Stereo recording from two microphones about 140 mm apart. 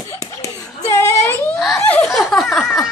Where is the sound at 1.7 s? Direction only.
10° left (ahead or behind).